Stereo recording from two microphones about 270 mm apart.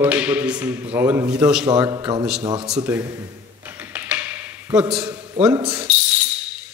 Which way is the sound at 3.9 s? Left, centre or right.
Centre.